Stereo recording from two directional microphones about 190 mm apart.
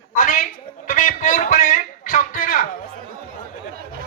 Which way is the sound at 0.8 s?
45° left (ahead or behind).